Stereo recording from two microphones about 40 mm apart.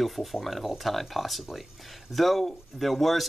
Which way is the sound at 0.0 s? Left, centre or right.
Centre.